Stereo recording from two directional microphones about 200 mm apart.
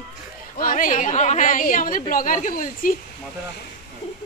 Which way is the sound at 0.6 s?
40° left (ahead or behind).